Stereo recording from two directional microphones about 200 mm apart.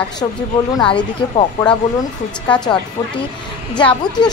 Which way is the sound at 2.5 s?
5° left (ahead or behind).